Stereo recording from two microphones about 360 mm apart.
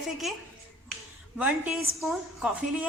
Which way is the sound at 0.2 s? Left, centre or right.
Centre.